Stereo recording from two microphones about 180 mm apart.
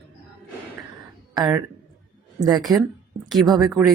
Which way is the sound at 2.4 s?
20° right (ahead or behind).